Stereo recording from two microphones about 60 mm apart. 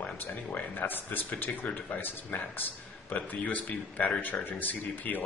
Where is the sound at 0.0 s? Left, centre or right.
Left.